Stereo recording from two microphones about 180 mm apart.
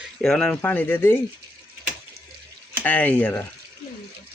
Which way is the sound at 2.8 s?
10° left (ahead or behind).